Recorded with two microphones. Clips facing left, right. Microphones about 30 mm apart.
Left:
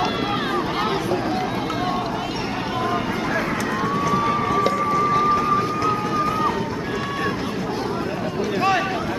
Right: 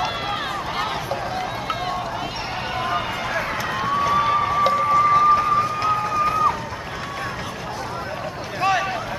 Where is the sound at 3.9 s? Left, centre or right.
Right.